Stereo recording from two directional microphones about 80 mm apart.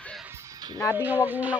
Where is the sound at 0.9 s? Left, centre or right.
Right.